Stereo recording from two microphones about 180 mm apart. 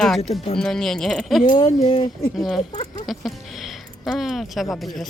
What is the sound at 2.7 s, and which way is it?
Speech, 40° left (ahead or behind).